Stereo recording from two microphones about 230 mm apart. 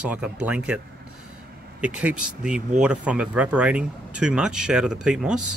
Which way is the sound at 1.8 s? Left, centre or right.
Centre.